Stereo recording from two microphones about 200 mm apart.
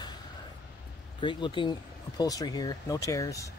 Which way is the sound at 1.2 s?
25° left (ahead or behind).